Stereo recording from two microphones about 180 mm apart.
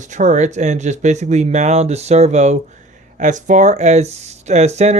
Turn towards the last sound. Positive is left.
turn(degrees=-35)  # may be behind; listen again after turning